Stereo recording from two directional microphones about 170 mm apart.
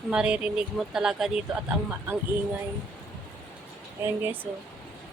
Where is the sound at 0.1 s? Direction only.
5° right (ahead or behind).